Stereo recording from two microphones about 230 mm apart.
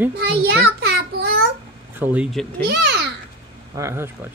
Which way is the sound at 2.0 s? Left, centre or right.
Centre.